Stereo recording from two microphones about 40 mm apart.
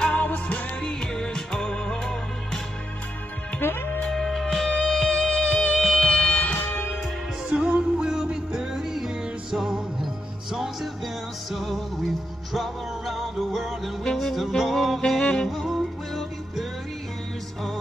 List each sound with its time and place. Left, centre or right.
0.2 s music: left
0.8 s music: centre
3.6 s music: left
4.1 s music: centre
6.0 s music: centre
7.4 s music: right
8.0 s music: centre
8.7 s music: centre
15.0 s music: centre
15.4 s music: centre